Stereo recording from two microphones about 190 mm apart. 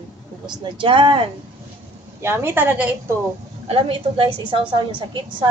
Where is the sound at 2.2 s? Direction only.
10° right (ahead or behind).